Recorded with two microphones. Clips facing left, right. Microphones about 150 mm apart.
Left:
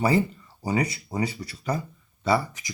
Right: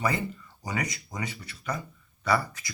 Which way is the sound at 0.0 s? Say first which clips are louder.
Left 7 dB; 30° left (ahead or behind).